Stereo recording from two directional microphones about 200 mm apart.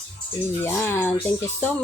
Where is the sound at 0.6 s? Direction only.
10° left (ahead or behind).